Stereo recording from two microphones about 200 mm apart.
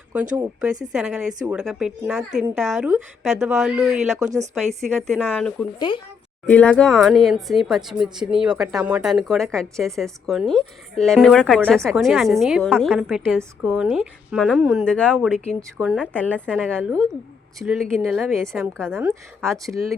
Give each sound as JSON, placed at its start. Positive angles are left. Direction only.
{"t": 0.9, "sound": "speech", "side_deg": -5}
{"t": 5.9, "sound": "a woman's voice", "side_deg": 25}
{"t": 6.4, "sound": "speech", "side_deg": 5}
{"t": 15.8, "sound": "speech", "side_deg": -5}
{"t": 16.1, "sound": "a woman's voice", "side_deg": 10}
{"t": 16.5, "sound": "speech", "side_deg": -10}
{"t": 17.6, "sound": "speech", "side_deg": 0}
{"t": 18.9, "sound": "speech", "side_deg": -10}